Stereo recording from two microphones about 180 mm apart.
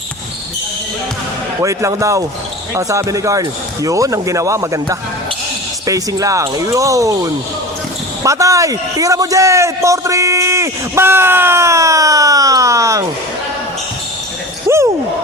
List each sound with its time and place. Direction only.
1.6 s a man's voice: 15° right (ahead or behind)
8.2 s a man's voice: 15° right (ahead or behind)